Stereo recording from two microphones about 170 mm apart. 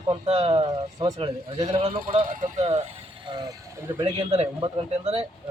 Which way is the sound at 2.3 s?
50° right (ahead or behind).